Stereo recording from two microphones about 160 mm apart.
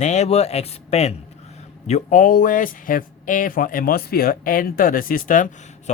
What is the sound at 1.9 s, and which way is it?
Speech, 50° left (ahead or behind).